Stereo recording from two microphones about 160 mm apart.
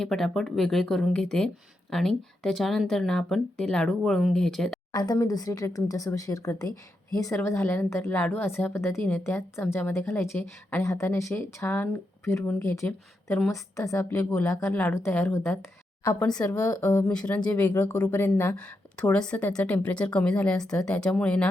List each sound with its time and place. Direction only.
0.0 s speech: centre (ahead or behind)
4.9 s speech: 25° left (ahead or behind); by 16.4 s 5° left (ahead or behind)
16.4 s speech: 15° left (ahead or behind)
17.1 s speech: 5° left (ahead or behind)